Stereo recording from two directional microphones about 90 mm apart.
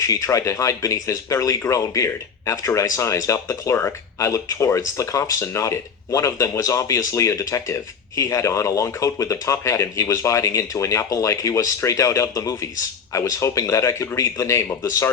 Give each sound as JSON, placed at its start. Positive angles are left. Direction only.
{"t": 0.0, "sound": "speech", "side_deg": 35}